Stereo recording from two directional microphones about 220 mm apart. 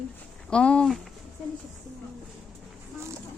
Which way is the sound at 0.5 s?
5° left (ahead or behind).